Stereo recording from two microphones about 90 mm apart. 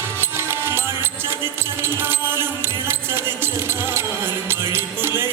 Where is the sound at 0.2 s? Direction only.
25° right (ahead or behind).